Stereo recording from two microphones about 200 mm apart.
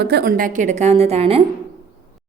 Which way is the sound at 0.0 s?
55° right (ahead or behind).